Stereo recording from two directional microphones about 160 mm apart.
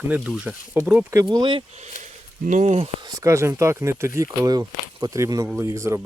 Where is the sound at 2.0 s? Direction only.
50° right (ahead or behind).